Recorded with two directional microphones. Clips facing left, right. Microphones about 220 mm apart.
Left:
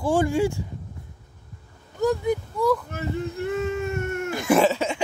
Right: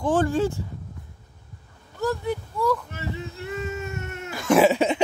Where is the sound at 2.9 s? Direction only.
50° left (ahead or behind).